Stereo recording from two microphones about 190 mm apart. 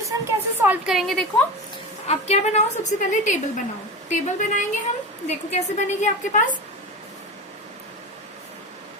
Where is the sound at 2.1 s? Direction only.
35° left (ahead or behind).